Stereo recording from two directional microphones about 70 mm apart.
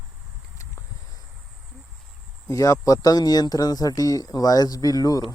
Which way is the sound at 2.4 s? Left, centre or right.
Left.